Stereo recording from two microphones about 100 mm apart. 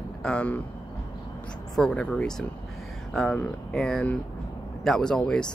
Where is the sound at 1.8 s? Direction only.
5° left (ahead or behind).